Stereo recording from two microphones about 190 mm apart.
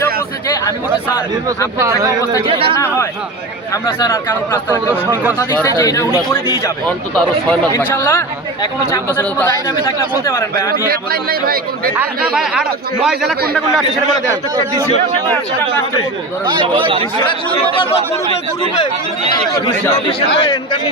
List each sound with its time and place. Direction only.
1.5 s speech: 15° right (ahead or behind)
2.5 s speech: 30° right (ahead or behind)
4.0 s speech: 15° left (ahead or behind)
5.6 s speech: 15° left (ahead or behind)
7.7 s speech: 10° left (ahead or behind)
10.7 s speech: 50° right (ahead or behind)
11.9 s a man's voice: 5° right (ahead or behind)
16.5 s speech: 25° right (ahead or behind)
19.5 s speech: 25° left (ahead or behind)